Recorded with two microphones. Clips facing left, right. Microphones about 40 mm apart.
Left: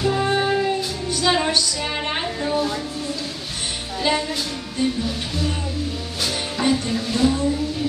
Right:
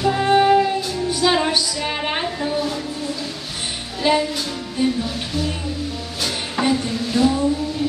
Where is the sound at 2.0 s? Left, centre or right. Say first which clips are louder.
Right 2 dB; centre.